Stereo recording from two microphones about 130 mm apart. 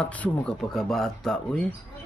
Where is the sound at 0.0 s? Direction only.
10° left (ahead or behind).